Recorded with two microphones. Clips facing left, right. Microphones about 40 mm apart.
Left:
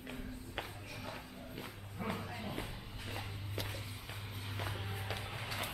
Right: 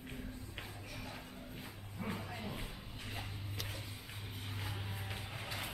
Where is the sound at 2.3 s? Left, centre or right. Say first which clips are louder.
Left 2 dB; centre.